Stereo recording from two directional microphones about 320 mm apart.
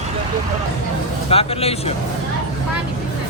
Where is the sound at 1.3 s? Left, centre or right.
Centre.